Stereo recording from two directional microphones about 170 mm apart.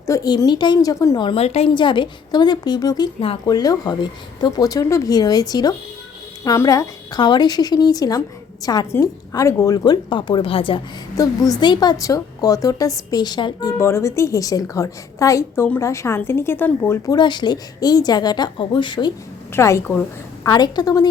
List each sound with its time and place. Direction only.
0.0 s a woman's voice: 20° left (ahead or behind)
11.2 s a woman's voice: 20° left (ahead or behind)
17.1 s a woman's voice: 25° left (ahead or behind)
19.5 s a woman's voice: 15° left (ahead or behind)